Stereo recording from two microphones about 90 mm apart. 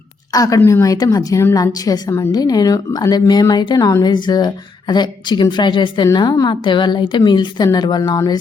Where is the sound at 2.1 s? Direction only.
30° left (ahead or behind).